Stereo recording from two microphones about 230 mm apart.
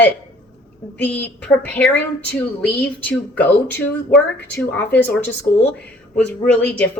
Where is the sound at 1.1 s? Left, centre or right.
Centre.